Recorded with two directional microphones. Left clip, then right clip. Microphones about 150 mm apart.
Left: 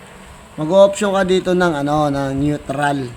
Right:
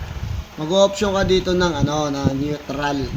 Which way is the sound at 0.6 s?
55° left (ahead or behind).